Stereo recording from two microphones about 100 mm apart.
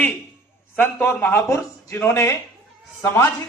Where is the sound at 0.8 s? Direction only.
20° left (ahead or behind).